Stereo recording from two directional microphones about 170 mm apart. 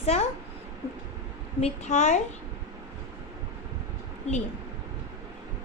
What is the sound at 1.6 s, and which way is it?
Speech, 45° left (ahead or behind).